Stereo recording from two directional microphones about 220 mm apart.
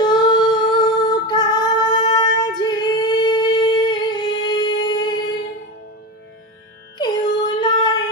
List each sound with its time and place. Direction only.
0.0 s singing: 20° left (ahead or behind)
7.0 s female singing: 20° left (ahead or behind)